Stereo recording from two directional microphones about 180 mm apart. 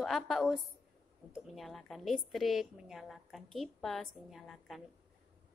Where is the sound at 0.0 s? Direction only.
Centre (ahead or behind).